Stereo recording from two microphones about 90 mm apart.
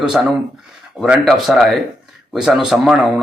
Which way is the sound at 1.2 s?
Centre (ahead or behind).